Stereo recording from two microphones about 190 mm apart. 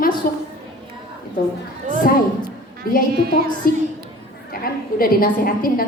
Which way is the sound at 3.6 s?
50° left (ahead or behind).